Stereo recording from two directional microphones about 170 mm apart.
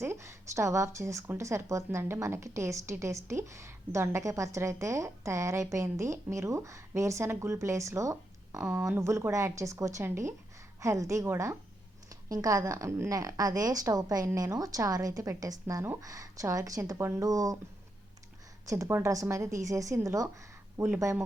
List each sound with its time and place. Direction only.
0.0 s a woman's voice: 15° right (ahead or behind)
18.6 s a woman's voice: 20° right (ahead or behind)